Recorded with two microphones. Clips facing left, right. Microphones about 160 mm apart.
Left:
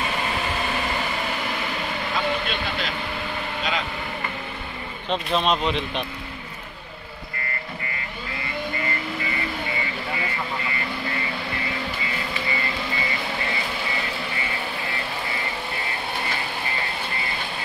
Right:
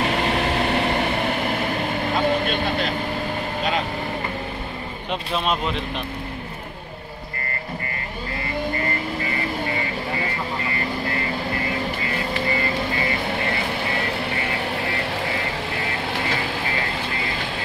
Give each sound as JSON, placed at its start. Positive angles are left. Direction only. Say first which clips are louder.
{"t": 0.0, "sound": "vehicle", "louder": "right 5 dB", "side_deg": -70}
{"t": 2.4, "sound": "speech", "louder": "right 5 dB", "side_deg": -45}
{"t": 5.1, "sound": "speech", "louder": "left 2 dB", "side_deg": -5}
{"t": 12.1, "sound": "vehicle", "louder": "right 5 dB", "side_deg": -50}